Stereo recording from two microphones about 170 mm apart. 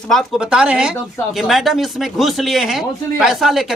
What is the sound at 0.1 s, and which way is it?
Speech, centre (ahead or behind).